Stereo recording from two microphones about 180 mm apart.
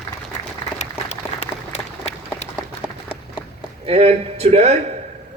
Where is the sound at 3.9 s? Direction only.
35° right (ahead or behind).